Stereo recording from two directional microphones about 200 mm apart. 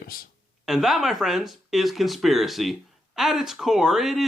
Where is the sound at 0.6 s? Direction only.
Centre (ahead or behind).